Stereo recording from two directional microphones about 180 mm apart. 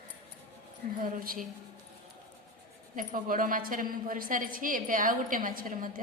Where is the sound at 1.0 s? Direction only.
50° right (ahead or behind).